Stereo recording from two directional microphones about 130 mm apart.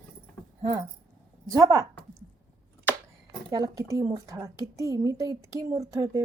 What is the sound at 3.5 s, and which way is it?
A woman's voice, 25° right (ahead or behind).